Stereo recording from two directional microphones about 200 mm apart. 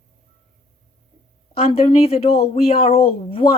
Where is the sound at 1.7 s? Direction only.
25° left (ahead or behind).